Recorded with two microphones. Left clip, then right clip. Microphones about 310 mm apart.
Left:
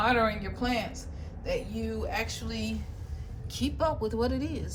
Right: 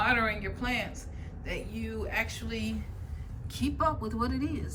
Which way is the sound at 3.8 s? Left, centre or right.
Centre.